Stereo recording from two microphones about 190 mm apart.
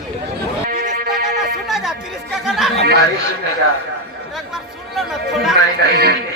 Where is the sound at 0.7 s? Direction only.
50° right (ahead or behind).